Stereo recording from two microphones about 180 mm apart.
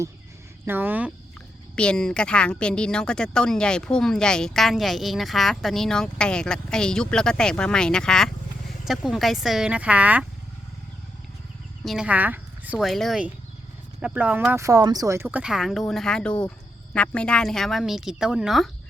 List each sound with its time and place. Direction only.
0.6 s speech: 10° right (ahead or behind)
1.7 s speech: 5° left (ahead or behind)
11.8 s speech: centre (ahead or behind)